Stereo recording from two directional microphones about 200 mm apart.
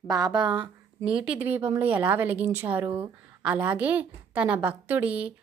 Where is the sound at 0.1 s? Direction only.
20° right (ahead or behind).